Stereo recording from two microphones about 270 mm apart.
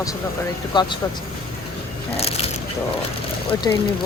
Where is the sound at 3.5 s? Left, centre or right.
Centre.